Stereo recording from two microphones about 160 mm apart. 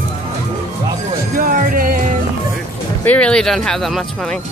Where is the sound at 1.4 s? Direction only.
60° right (ahead or behind).